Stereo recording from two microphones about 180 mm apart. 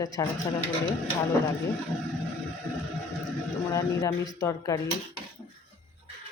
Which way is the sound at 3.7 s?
20° left (ahead or behind).